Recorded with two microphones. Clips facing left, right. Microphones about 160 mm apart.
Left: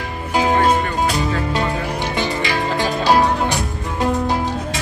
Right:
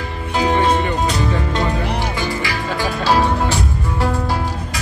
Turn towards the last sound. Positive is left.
turn(degrees=15)  # may be behind; listen again after turning